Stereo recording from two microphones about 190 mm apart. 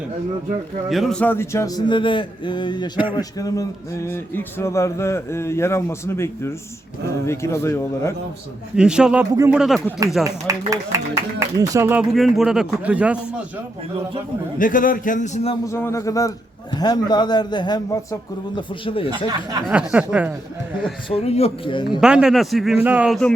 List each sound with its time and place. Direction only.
0.9 s a man's voice: centre (ahead or behind)
8.7 s a man's voice: 5° right (ahead or behind)
10.7 s speech: 15° right (ahead or behind)
12.1 s a man's voice: centre (ahead or behind)
14.6 s a man's voice: 45° left (ahead or behind)
15.6 s a man's voice: 15° left (ahead or behind)
19.1 s speech: 20° right (ahead or behind)
19.6 s speech: 5° right (ahead or behind)
21.2 s a man's voice: 30° left (ahead or behind)
22.0 s a man's voice: 5° right (ahead or behind)